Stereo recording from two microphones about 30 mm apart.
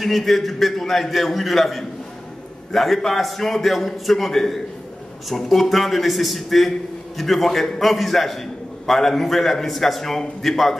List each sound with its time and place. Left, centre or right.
0.0 s a man's voice: centre